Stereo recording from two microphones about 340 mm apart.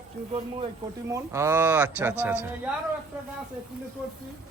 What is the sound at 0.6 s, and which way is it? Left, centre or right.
A man's voice, centre.